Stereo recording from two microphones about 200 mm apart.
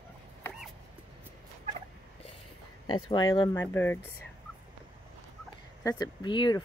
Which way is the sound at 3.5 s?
10° left (ahead or behind).